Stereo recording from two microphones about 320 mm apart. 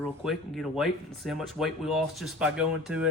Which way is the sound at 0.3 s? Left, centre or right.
Centre.